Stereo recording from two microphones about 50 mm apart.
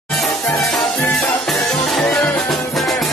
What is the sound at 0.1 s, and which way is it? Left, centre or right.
Music, centre.